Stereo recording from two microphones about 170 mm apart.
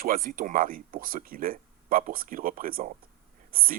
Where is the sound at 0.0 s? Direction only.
55° right (ahead or behind).